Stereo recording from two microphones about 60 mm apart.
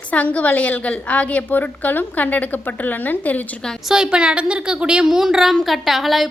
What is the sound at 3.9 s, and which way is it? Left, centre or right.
A woman's voice, centre.